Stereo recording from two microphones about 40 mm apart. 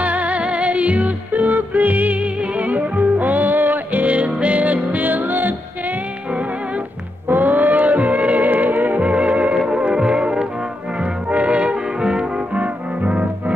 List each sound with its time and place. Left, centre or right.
0.0 s music: right
7.2 s music: right
9.0 s music: right
12.0 s brass instrument: right
12.5 s music: right